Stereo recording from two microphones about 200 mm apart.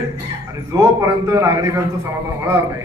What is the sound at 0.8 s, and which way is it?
A man's voice, 15° right (ahead or behind).